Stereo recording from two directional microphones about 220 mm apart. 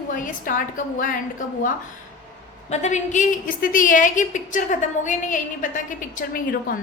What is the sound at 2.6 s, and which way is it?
A woman's voice, 35° left (ahead or behind).